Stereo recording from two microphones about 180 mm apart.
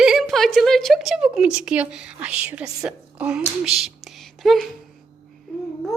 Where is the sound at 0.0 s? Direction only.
Centre (ahead or behind).